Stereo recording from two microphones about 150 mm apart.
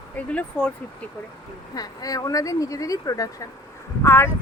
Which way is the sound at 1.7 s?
25° left (ahead or behind).